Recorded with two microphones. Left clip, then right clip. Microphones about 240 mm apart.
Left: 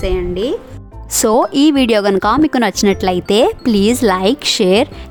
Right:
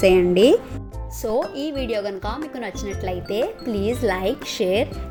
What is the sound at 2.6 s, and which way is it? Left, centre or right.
Speech, left.